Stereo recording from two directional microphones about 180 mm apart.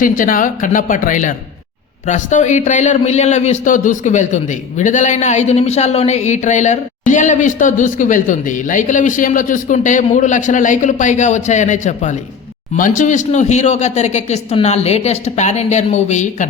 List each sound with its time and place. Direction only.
0.0 s speech: 50° left (ahead or behind)